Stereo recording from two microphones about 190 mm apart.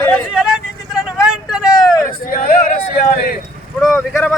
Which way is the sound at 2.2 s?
45° left (ahead or behind).